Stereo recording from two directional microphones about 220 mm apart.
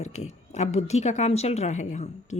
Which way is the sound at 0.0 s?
30° left (ahead or behind).